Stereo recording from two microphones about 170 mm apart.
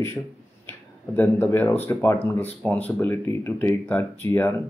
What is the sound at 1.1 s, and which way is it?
Speech, 10° left (ahead or behind).